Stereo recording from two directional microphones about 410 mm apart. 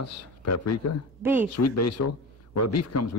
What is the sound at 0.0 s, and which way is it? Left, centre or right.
Speech, left.